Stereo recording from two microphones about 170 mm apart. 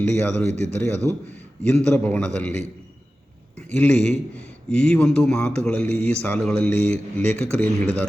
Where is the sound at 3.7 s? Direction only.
10° left (ahead or behind).